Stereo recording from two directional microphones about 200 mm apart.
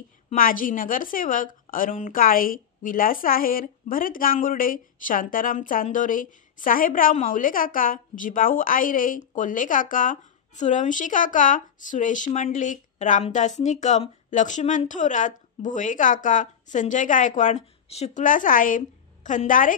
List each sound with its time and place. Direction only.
0.3 s a woman's voice: 45° left (ahead or behind)